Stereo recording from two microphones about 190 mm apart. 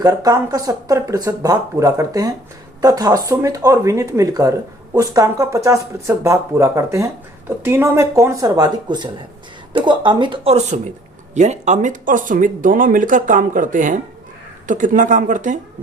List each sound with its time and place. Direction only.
0.0 s speech: 20° right (ahead or behind); by 15.5 s 40° right (ahead or behind)